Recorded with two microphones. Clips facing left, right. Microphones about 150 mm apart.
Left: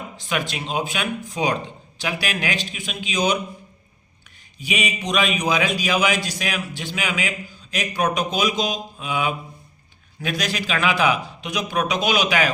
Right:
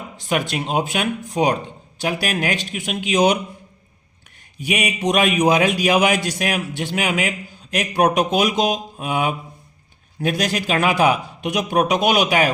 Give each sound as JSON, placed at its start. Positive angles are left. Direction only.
{"t": 0.3, "sound": "a man's voice", "side_deg": -50}
{"t": 4.6, "sound": "a man's voice", "side_deg": -60}